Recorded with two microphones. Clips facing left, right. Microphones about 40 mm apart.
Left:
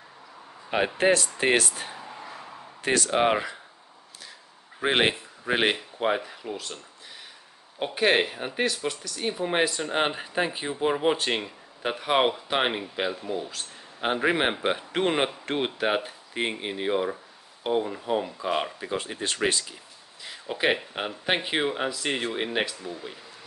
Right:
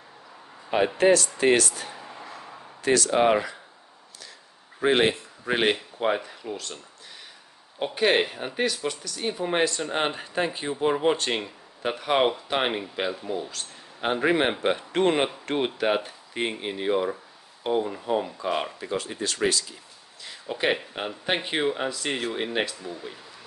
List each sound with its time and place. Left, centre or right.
0.7 s speech: centre
2.0 s a sound: centre
2.8 s speech: left
3.1 s speech: centre
4.8 s speech: left
5.4 s speech: centre
7.8 s speech: centre
18.9 s speech: left
20.2 s speech: centre